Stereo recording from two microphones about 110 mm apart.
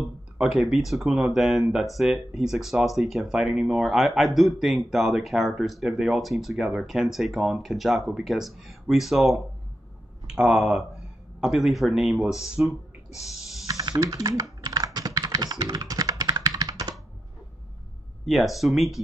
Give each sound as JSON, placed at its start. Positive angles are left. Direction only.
{"t": 0.0, "sound": "speech", "side_deg": -5}
{"t": 13.7, "sound": "typing", "side_deg": -30}
{"t": 18.2, "sound": "speech", "side_deg": 0}